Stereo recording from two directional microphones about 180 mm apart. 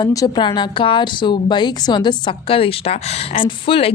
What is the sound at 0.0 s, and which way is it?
A woman's voice, 20° left (ahead or behind).